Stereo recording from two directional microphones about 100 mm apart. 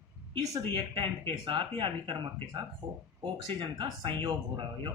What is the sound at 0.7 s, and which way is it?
Speech, 55° right (ahead or behind).